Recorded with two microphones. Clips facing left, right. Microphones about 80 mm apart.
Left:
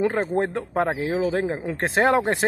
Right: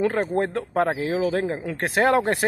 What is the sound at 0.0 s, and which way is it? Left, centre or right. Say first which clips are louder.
Speech: even; left.